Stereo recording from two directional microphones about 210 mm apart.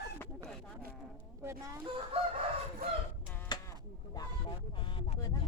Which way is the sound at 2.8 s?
45° right (ahead or behind).